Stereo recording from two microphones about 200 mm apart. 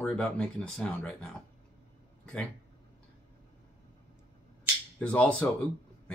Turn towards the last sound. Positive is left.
turn(degrees=5)  # may be behind; listen again after turning